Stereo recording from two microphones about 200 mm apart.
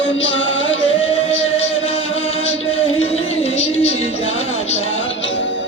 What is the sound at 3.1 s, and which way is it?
Music, 30° left (ahead or behind).